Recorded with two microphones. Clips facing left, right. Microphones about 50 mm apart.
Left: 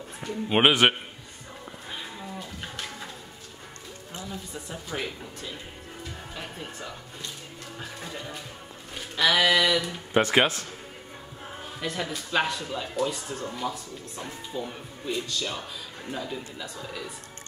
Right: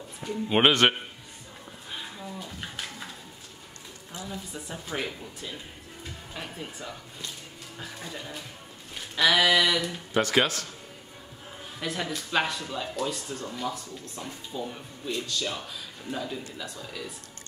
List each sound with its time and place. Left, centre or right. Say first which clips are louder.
0.2 s speech: left 1 dB; centre
4.3 s a man's voice: even; centre
8.0 s a man's voice: even; centre
10.1 s speech: left 3 dB; left
11.8 s a man's voice: even; centre